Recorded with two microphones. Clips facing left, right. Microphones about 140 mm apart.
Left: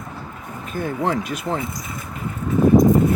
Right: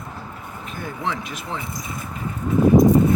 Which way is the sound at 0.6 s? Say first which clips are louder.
Left 6 dB; 45° left (ahead or behind).